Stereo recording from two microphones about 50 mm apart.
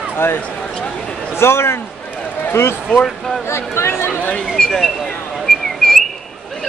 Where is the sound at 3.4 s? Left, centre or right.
Left.